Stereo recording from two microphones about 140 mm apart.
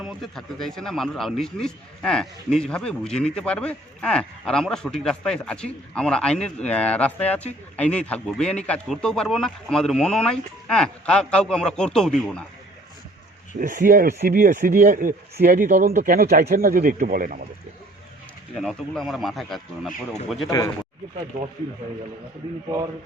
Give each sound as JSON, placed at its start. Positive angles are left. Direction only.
{"t": 0.0, "sound": "speech", "side_deg": 0}
{"t": 13.6, "sound": "speech", "side_deg": -70}
{"t": 18.6, "sound": "speech", "side_deg": 5}